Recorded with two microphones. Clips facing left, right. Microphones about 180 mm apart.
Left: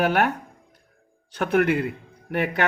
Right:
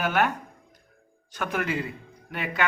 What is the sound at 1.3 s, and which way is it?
A man's voice, 65° left (ahead or behind).